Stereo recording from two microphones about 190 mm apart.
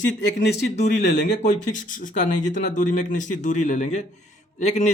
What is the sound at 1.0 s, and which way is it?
Speech, 65° left (ahead or behind).